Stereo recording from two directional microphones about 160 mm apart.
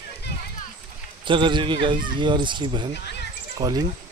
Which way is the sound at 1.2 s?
30° right (ahead or behind).